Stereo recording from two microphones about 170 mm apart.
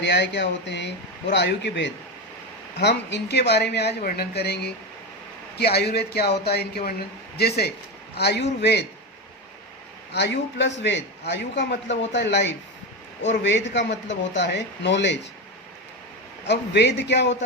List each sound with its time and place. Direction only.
0.0 s a man's voice: 90° left
10.1 s a man's voice: 90° left
16.5 s a man's voice: 90° left